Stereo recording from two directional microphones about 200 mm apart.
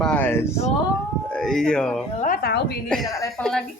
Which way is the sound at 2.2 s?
50° left (ahead or behind).